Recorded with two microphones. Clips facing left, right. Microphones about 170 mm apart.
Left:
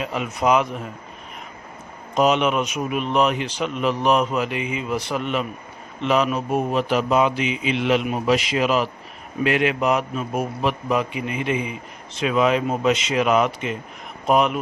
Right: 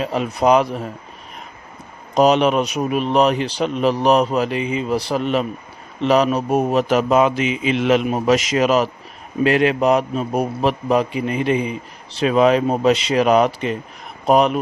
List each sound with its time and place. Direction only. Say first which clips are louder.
0.0 s a man's voice: right 4 dB; 35° right (ahead or behind)
2.1 s a man's voice: right 4 dB; 35° right (ahead or behind)